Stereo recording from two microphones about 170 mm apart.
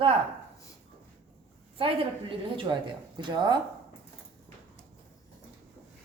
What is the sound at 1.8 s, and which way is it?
A woman's voice, 30° right (ahead or behind).